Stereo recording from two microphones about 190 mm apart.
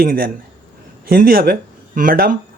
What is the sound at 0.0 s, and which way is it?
Speech, 50° right (ahead or behind).